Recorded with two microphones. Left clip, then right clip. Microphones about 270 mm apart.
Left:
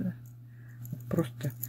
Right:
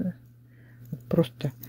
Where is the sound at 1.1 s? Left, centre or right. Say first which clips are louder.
Right 7 dB; right.